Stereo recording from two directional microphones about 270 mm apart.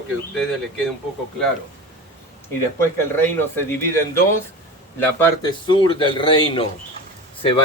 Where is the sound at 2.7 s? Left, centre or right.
Centre.